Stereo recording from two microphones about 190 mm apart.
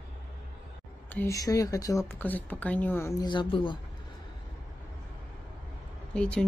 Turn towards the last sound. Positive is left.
turn(degrees=5)  # may be behind; listen again after turning